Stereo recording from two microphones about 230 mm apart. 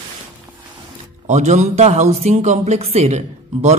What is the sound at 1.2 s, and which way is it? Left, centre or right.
Speech, right.